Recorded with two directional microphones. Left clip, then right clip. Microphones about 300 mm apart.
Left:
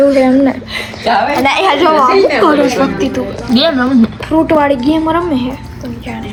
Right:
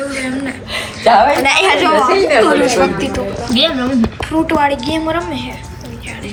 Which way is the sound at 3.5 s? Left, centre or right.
Centre.